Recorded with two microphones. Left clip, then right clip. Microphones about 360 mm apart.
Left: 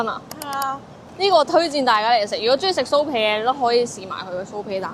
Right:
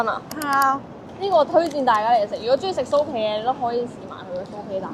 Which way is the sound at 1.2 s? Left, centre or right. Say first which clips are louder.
Left 2 dB; left.